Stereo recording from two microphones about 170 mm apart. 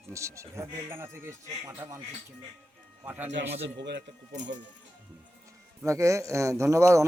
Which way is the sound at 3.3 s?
90° right.